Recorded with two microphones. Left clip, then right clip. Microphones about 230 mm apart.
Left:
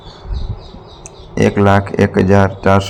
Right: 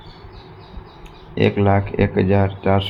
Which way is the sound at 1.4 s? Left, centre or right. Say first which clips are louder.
Left 5 dB; centre.